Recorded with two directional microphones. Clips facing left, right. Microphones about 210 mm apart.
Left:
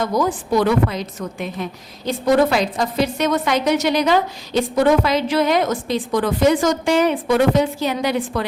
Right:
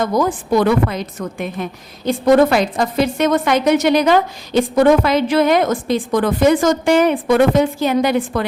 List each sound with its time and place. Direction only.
0.0 s a woman's voice: 50° right (ahead or behind)